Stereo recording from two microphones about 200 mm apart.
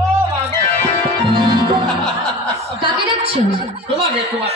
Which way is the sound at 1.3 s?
25° right (ahead or behind).